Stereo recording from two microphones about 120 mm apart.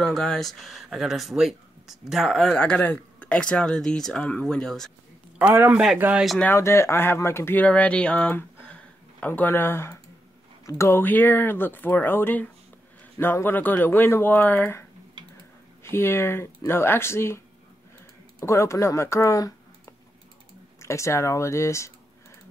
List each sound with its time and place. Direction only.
0.0 s speech: 5° left (ahead or behind)
5.5 s speech: 20° right (ahead or behind)
6.4 s speech: 20° left (ahead or behind)
15.2 s a sound: 40° right (ahead or behind)
15.8 s speech: 20° left (ahead or behind)
18.4 s speech: 25° left (ahead or behind)
20.8 s speech: 25° left (ahead or behind)